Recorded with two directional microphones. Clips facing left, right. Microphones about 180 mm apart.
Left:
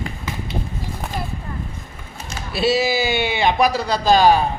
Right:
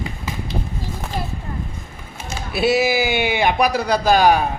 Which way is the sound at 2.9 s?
15° right (ahead or behind).